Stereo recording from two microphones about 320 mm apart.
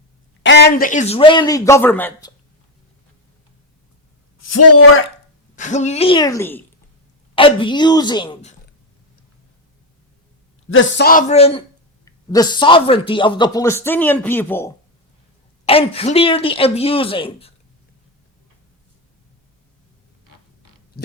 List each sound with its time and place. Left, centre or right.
0.4 s speech: left; by 2.3 s centre
4.4 s a man's voice: left
5.5 s speech: left
10.7 s a man's voice: left; by 14.7 s centre
15.6 s speech: centre